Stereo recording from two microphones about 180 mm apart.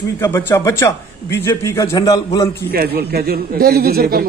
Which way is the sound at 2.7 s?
60° right (ahead or behind).